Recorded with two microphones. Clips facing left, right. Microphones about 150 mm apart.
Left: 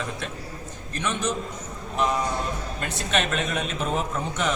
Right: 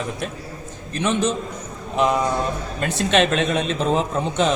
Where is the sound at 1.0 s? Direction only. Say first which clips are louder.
Right 6 dB; 25° right (ahead or behind).